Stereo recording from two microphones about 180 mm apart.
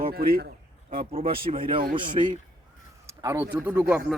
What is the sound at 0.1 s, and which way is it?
Speech, 55° right (ahead or behind).